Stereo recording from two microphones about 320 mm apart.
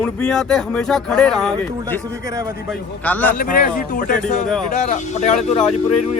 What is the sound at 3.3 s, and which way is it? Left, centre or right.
Speech, left.